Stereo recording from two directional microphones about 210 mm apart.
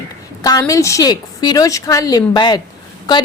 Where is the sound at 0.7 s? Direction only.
15° left (ahead or behind).